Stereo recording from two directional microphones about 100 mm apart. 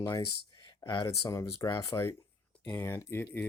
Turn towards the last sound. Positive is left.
turn(degrees=20)  # may be behind; listen again after turning